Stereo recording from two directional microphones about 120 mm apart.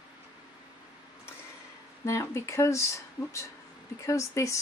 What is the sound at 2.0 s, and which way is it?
A woman's voice, 25° left (ahead or behind).